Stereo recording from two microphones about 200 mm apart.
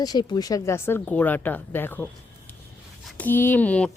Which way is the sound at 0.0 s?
20° left (ahead or behind).